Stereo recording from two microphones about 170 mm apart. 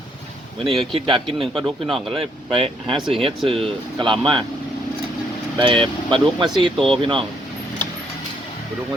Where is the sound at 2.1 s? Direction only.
35° right (ahead or behind).